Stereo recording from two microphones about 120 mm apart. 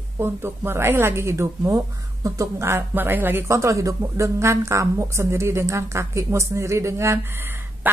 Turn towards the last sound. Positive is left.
turn(degrees=-20)  # may be behind; listen again after turning